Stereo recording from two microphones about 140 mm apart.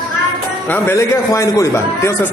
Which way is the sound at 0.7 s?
15° left (ahead or behind).